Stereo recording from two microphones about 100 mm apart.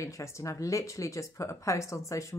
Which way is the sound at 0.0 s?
30° left (ahead or behind).